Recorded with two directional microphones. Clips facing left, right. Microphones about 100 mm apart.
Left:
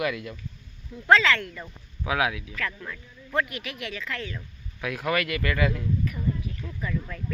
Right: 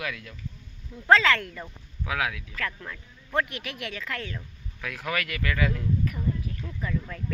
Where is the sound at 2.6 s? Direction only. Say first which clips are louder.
Left 1 dB; 35° right (ahead or behind).